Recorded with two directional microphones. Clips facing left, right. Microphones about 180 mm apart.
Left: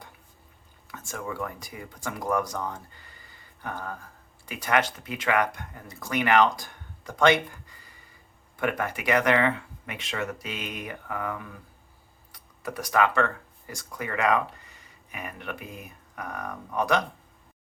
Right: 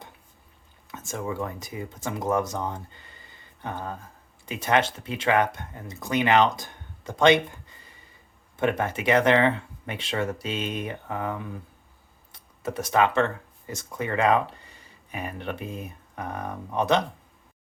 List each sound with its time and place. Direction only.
0.9 s speech: 20° right (ahead or behind)